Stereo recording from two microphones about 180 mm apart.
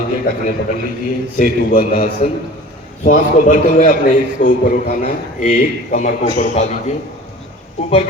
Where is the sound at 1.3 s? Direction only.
50° left (ahead or behind).